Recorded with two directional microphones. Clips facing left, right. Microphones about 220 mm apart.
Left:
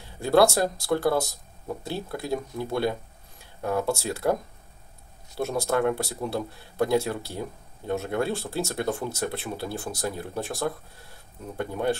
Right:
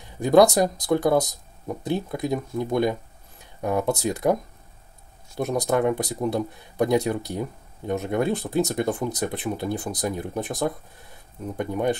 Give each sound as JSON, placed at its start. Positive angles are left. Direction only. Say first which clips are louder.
{"t": 0.2, "sound": "speech", "louder": "right 4 dB", "side_deg": -15}
{"t": 5.4, "sound": "speech", "louder": "right 2 dB", "side_deg": -20}